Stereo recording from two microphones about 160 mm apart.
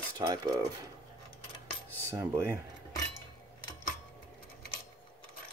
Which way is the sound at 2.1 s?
15° right (ahead or behind).